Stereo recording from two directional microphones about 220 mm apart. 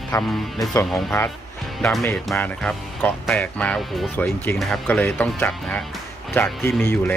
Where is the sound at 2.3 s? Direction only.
5° left (ahead or behind).